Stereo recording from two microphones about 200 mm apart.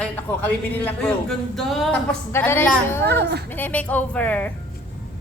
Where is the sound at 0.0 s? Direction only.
10° left (ahead or behind).